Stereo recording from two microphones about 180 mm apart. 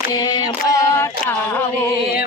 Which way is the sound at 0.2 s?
20° left (ahead or behind).